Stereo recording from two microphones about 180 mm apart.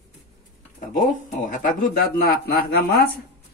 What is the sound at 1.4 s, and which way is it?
Speech, 45° left (ahead or behind).